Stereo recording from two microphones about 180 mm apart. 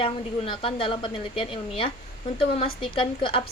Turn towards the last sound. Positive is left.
turn(degrees=30)  # may be behind; listen again after turning